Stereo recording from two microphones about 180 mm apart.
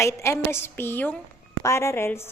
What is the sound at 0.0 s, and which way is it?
A woman's voice, 15° left (ahead or behind).